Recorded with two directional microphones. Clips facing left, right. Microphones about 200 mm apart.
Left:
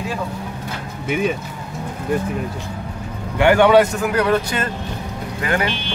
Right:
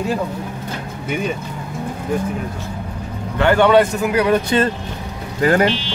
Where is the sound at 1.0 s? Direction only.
5° left (ahead or behind).